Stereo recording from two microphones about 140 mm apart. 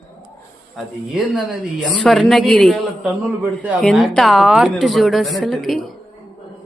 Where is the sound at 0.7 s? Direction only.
Centre (ahead or behind).